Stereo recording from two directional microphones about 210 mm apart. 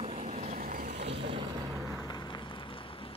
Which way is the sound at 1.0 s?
55° right (ahead or behind).